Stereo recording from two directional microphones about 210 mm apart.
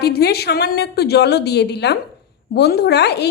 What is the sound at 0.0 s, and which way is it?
A woman's voice, 50° left (ahead or behind).